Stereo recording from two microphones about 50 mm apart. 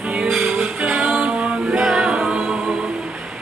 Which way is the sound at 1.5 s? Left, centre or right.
Centre.